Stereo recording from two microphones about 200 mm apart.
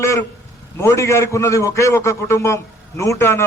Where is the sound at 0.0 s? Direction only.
15° left (ahead or behind).